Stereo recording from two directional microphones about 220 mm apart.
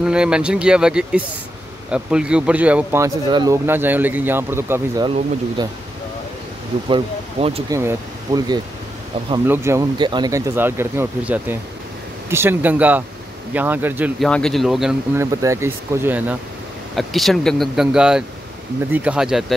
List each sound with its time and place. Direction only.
0.0 s speech: 5° right (ahead or behind); by 5.7 s 20° right (ahead or behind)
6.9 s speech: 25° right (ahead or behind)
7.7 s speech: 15° right (ahead or behind)
15.4 s speech: 15° right (ahead or behind)